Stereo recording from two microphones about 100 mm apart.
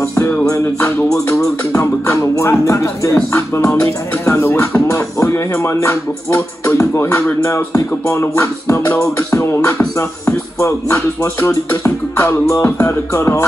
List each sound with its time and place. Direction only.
0.5 s music: 30° left (ahead or behind)